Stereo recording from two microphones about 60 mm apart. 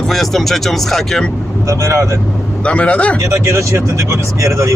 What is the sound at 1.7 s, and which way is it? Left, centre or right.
Speech, right.